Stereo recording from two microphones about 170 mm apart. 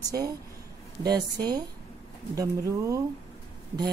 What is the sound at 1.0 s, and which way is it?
A woman's voice, 25° right (ahead or behind).